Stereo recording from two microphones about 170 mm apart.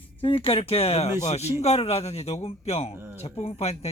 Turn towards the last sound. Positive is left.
turn(degrees=40)  # may be behind; listen again after turning